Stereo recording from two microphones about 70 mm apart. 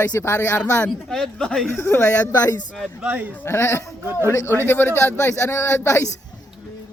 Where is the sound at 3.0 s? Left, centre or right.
Right.